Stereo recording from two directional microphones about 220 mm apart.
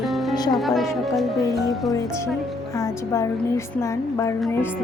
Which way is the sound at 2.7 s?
15° left (ahead or behind).